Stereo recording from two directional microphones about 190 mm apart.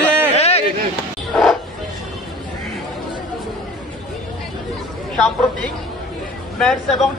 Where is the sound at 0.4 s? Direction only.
35° left (ahead or behind).